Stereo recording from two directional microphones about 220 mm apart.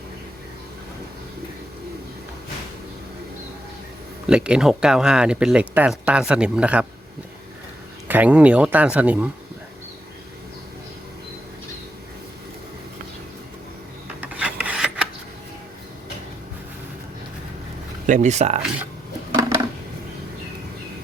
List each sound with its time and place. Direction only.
4.3 s speech: 5° right (ahead or behind)
8.0 s speech: 5° right (ahead or behind)
14.3 s filing: 5° right (ahead or behind)
18.0 s speech: 35° right (ahead or behind)
19.3 s a sound: 15° right (ahead or behind)